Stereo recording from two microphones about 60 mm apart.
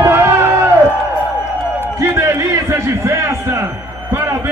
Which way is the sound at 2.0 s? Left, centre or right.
Right.